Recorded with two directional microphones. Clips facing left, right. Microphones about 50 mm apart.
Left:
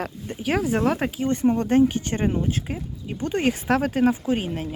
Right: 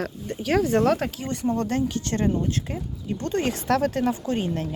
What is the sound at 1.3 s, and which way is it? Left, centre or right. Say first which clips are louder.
Speech: left 5 dB; left.